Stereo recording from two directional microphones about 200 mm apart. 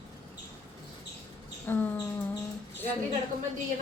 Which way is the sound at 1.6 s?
10° left (ahead or behind).